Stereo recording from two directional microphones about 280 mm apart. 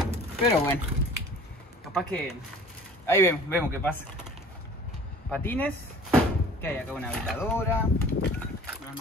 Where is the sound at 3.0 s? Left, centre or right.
Centre.